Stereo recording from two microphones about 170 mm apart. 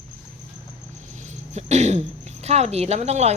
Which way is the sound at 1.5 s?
40° right (ahead or behind).